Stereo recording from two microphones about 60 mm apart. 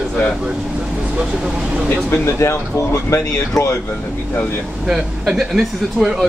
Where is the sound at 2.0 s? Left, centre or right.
Left.